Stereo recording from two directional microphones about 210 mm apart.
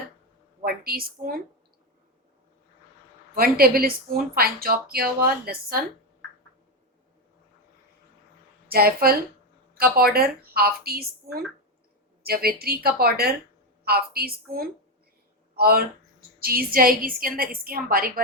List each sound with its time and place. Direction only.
0.6 s a woman's voice: 45° right (ahead or behind)
3.3 s speech: 45° right (ahead or behind)
8.6 s a woman's voice: 45° right (ahead or behind)